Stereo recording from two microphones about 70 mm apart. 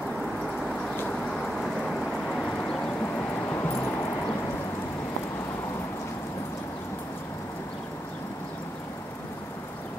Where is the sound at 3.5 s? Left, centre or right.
Left.